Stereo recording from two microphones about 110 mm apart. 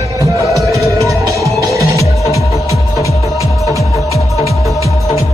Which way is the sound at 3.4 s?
30° left (ahead or behind).